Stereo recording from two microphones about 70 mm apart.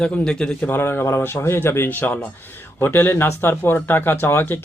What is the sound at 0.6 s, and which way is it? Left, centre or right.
Speech, left.